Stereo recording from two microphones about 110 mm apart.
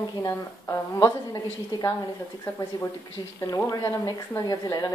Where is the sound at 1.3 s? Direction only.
35° left (ahead or behind).